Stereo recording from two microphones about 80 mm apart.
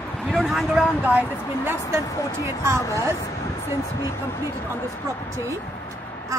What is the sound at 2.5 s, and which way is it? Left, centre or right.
Speech, right.